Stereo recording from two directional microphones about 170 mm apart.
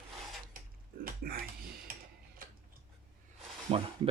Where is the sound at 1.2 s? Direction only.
65° right (ahead or behind).